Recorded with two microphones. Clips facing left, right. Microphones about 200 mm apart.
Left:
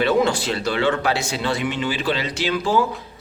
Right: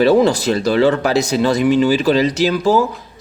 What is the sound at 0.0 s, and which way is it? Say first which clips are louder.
Speech: right 7 dB; 35° right (ahead or behind).